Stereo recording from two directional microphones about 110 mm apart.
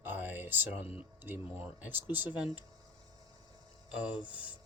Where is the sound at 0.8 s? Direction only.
60° left (ahead or behind).